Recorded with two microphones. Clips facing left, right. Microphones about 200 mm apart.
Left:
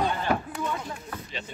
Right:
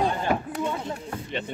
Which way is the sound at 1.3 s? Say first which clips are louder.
Right 7 dB; 60° right (ahead or behind).